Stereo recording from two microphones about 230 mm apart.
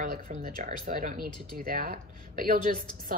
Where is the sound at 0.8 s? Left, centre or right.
Right.